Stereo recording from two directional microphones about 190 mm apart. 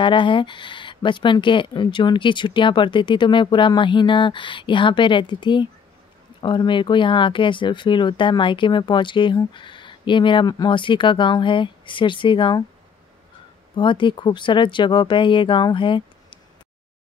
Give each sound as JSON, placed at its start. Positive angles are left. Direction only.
{"t": 0.0, "sound": "speech", "side_deg": 25}
{"t": 13.7, "sound": "speech", "side_deg": 25}